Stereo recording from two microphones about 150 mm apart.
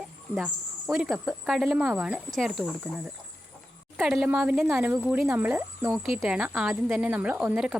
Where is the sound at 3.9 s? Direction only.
Centre (ahead or behind).